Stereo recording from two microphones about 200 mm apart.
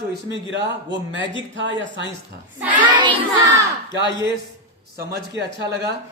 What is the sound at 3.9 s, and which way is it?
A man's voice, 60° right (ahead or behind).